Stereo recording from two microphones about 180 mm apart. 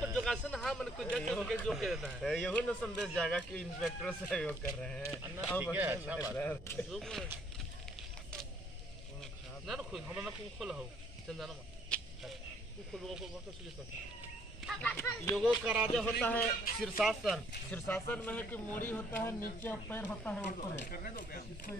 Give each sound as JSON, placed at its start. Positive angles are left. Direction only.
{"t": 0.0, "sound": "a man's voice", "side_deg": 0}
{"t": 5.6, "sound": "speech", "side_deg": -10}
{"t": 6.3, "sound": "speech", "side_deg": 10}
{"t": 9.2, "sound": "speech", "side_deg": 0}
{"t": 11.2, "sound": "a sound", "side_deg": 0}
{"t": 12.9, "sound": "a man's voice", "side_deg": 0}
{"t": 14.7, "sound": "speech", "side_deg": 10}
{"t": 15.6, "sound": "a man's voice", "side_deg": -5}
{"t": 17.7, "sound": "speech", "side_deg": 10}
{"t": 20.8, "sound": "speech", "side_deg": 50}